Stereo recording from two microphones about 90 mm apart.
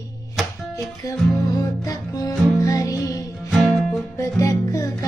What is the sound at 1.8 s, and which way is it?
Music, 40° left (ahead or behind).